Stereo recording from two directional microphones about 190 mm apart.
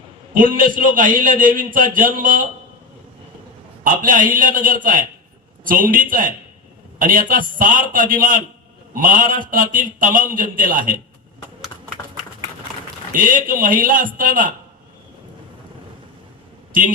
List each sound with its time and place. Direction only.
0.3 s a man's voice: 45° right (ahead or behind)
3.8 s a man's voice: 45° right (ahead or behind)
13.1 s a man's voice: 45° right (ahead or behind)